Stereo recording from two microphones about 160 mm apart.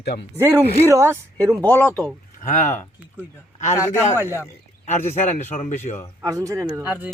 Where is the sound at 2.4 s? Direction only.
50° left (ahead or behind).